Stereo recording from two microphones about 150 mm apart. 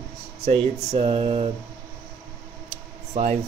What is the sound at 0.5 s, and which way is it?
Speech, 45° right (ahead or behind).